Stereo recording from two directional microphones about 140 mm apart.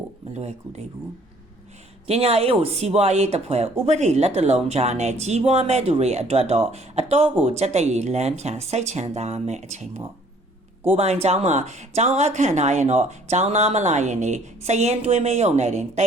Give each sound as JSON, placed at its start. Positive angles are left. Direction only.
{"t": 0.3, "sound": "speech", "side_deg": -50}
{"t": 2.0, "sound": "speech", "side_deg": -45}